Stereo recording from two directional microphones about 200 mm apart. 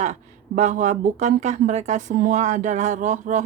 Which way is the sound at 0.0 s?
35° right (ahead or behind).